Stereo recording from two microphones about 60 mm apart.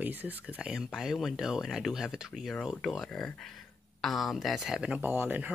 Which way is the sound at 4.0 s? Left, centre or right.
Centre.